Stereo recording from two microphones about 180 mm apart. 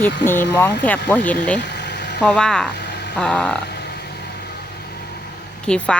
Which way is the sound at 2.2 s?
5° left (ahead or behind).